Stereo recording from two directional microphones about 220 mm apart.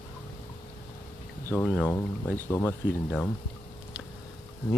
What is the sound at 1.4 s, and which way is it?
Speech, 10° left (ahead or behind).